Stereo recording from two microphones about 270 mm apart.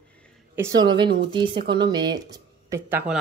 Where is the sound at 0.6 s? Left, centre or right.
Centre.